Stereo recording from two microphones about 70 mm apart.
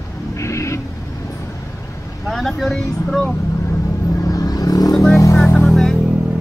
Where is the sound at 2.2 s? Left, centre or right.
Centre.